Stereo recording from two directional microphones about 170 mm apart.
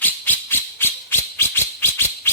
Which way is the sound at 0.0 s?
10° left (ahead or behind).